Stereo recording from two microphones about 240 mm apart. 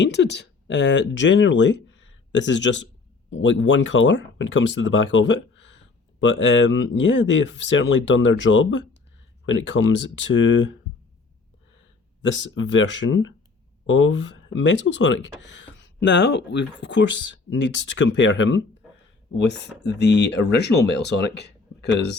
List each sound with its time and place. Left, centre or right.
0.0 s speech: left
12.2 s speech: left